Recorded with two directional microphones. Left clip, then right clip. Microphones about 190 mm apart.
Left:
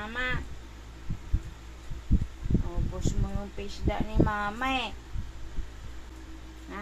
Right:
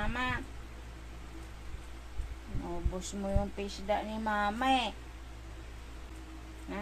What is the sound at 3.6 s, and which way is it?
Speech, 20° right (ahead or behind).